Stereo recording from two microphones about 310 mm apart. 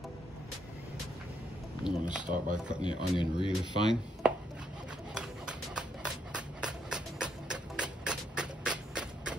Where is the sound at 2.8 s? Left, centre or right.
Centre.